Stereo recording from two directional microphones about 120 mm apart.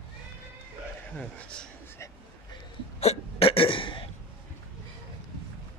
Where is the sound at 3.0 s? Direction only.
55° left (ahead or behind).